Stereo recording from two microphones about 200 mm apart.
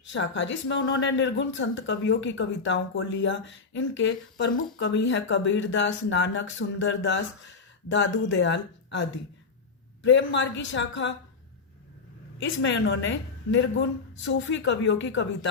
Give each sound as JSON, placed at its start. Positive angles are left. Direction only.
{"t": 0.0, "sound": "a woman's voice", "side_deg": 70}
{"t": 12.4, "sound": "a woman's voice", "side_deg": 65}